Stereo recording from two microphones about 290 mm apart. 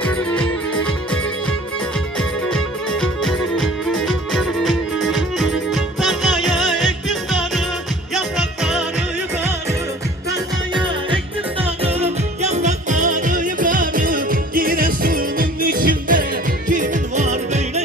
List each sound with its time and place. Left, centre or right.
2.5 s music: centre
11.8 s music: right